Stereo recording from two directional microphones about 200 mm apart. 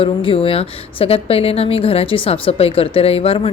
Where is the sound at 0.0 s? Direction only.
25° left (ahead or behind).